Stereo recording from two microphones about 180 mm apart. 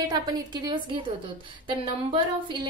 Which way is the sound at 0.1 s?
25° right (ahead or behind).